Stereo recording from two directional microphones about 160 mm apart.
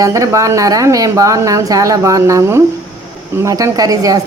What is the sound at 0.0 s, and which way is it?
A woman's voice, 20° right (ahead or behind).